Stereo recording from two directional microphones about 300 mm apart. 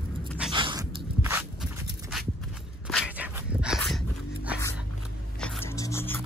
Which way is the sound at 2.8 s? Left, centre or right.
Centre.